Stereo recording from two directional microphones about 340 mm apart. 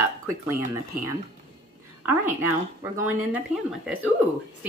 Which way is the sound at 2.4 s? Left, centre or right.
Centre.